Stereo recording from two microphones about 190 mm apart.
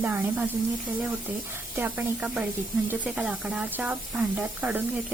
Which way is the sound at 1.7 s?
10° right (ahead or behind).